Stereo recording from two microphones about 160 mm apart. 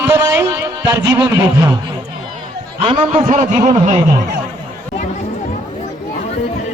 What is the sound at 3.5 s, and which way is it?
Speech, 25° right (ahead or behind).